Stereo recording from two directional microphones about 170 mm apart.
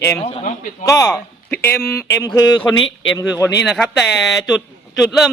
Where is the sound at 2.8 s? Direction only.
90° left.